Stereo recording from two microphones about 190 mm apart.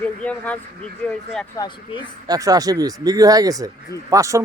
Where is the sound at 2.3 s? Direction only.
20° right (ahead or behind).